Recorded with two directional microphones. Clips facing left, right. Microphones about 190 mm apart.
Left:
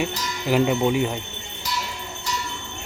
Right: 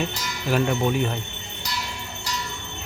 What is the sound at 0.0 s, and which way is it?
Speech, 15° left (ahead or behind).